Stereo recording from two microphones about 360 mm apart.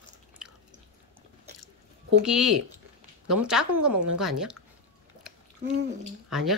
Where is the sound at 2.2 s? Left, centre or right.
Centre.